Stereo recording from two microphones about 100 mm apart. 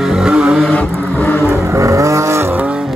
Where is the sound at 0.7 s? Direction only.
20° left (ahead or behind).